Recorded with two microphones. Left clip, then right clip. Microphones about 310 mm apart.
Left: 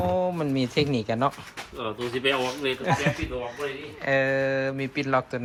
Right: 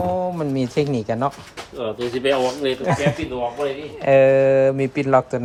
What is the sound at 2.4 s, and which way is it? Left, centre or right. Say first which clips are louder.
Speech: right 6 dB; centre.